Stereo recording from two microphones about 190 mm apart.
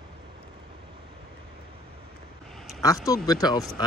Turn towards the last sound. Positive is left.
turn(degrees=20)  # may be behind; listen again after turning